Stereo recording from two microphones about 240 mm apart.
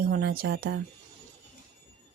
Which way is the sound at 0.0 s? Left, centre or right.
Right.